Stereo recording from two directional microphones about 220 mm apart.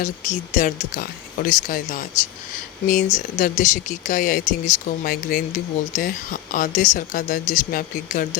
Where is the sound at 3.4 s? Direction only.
35° left (ahead or behind).